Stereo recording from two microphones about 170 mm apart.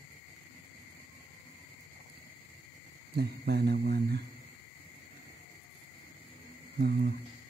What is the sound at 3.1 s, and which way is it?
Speech, 70° right (ahead or behind).